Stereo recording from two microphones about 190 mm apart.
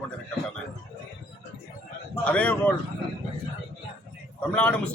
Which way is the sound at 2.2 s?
5° left (ahead or behind).